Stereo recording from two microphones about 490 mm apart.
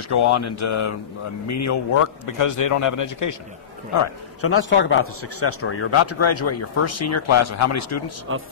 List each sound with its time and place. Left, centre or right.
0.1 s a man's voice: left
8.3 s speech: right